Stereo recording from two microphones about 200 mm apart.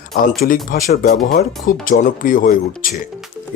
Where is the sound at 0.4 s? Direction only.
45° left (ahead or behind).